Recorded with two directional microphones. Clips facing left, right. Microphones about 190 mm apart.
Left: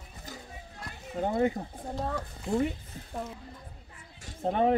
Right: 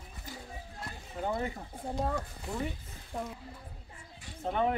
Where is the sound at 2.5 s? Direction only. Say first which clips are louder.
Left 10 dB; 25° left (ahead or behind).